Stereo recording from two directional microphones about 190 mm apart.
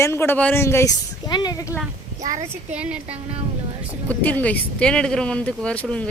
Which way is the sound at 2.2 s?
40° right (ahead or behind).